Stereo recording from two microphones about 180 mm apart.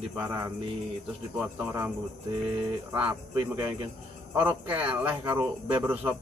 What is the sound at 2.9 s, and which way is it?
Speech, 10° right (ahead or behind).